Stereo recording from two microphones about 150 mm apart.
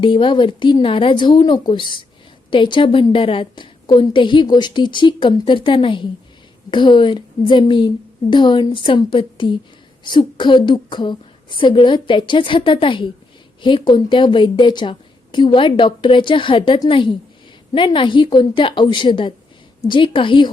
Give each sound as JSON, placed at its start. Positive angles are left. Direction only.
{"t": 0.0, "sound": "a woman's voice", "side_deg": 35}